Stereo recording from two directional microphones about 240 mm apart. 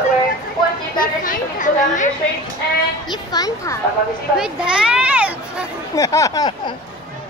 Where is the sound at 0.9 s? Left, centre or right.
Left.